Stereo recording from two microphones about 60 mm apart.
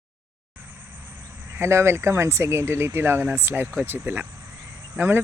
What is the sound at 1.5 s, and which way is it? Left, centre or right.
Speech, right.